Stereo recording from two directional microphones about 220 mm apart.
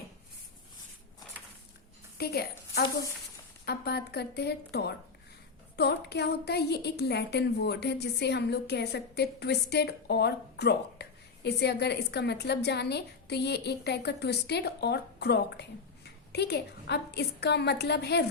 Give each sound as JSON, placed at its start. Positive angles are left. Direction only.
{"t": 2.1, "sound": "a woman's voice", "side_deg": 45}